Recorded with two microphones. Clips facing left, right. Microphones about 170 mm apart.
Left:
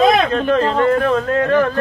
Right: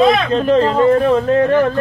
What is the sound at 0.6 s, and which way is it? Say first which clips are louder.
Speech: right 4 dB; 25° right (ahead or behind).